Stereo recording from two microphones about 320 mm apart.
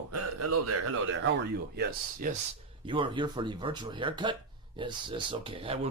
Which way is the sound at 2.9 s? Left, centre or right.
Centre.